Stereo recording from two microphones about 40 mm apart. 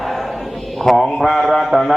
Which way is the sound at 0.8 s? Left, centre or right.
Centre.